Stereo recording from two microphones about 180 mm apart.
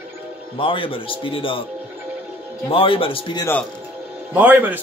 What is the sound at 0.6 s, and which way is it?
Speech, 30° left (ahead or behind).